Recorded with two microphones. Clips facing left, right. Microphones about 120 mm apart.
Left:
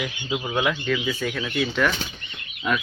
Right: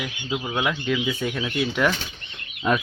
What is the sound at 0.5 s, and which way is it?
Speech, 10° right (ahead or behind).